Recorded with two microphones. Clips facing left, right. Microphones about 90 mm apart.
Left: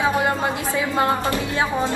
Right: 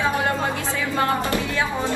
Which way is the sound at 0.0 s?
20° left (ahead or behind).